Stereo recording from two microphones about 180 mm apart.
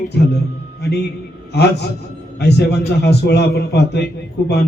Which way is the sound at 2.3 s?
65° left (ahead or behind).